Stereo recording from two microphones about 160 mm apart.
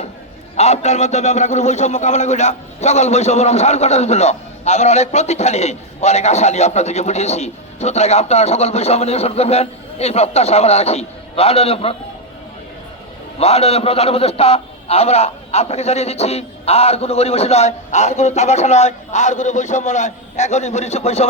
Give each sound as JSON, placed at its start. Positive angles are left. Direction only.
{"t": 0.5, "sound": "a man's voice", "side_deg": 40}
{"t": 13.4, "sound": "a man's voice", "side_deg": 40}